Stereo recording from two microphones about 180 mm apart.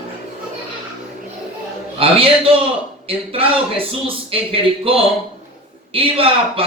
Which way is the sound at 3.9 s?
30° right (ahead or behind).